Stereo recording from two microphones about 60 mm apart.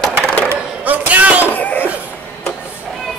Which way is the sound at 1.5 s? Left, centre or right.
Left.